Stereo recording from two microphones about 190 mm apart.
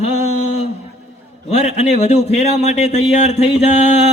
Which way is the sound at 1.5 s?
35° left (ahead or behind).